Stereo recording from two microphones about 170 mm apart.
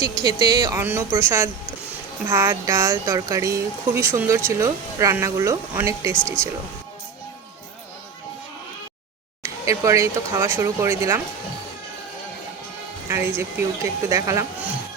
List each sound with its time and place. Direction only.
0.2 s speech: 25° right (ahead or behind)
0.8 s speech: 10° right (ahead or behind)
6.1 s speech: 5° left (ahead or behind)
9.4 s speech: 20° right (ahead or behind)
13.1 s speech: 15° right (ahead or behind)